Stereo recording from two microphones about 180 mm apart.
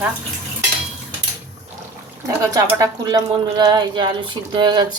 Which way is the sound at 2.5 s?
20° right (ahead or behind).